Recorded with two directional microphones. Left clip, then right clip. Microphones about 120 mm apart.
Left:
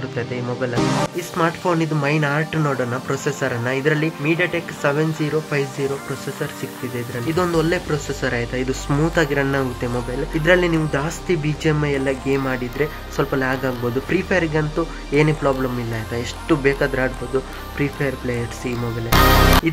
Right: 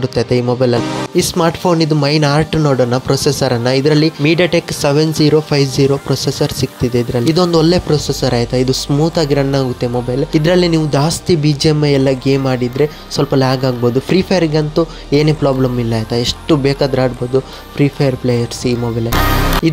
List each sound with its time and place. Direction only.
0.1 s speech: 55° right (ahead or behind)
4.2 s speech: 65° right (ahead or behind)
7.5 s speech: 40° right (ahead or behind)
8.8 s speech: centre (ahead or behind)
9.1 s speech: 35° right (ahead or behind)
19.0 s speech: centre (ahead or behind)